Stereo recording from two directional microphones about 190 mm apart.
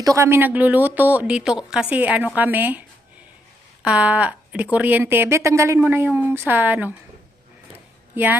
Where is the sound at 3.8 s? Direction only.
5° right (ahead or behind).